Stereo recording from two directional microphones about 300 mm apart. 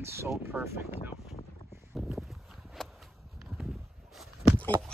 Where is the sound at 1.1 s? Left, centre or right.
Centre.